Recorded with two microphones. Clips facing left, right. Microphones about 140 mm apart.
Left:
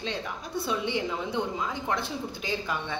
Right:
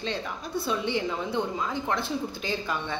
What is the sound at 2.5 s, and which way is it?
Speech, 10° left (ahead or behind).